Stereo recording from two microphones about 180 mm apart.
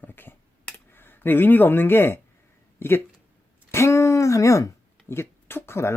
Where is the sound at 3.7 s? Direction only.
15° left (ahead or behind).